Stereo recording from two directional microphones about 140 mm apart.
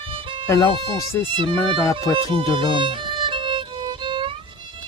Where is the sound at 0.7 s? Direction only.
35° right (ahead or behind).